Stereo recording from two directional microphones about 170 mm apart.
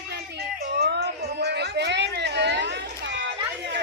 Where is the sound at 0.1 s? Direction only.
80° right.